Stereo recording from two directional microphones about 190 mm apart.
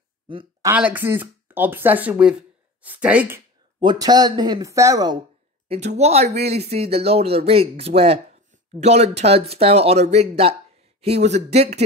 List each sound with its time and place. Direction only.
0.3 s speech: 25° right (ahead or behind)
0.7 s speech: 10° right (ahead or behind)
3.8 s speech: 20° right (ahead or behind)
5.7 s speech: 35° right (ahead or behind)